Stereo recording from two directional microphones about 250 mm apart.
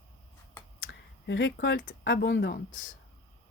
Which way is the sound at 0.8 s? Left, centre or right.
Left.